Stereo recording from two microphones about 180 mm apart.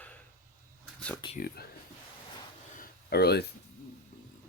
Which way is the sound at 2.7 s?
60° left (ahead or behind).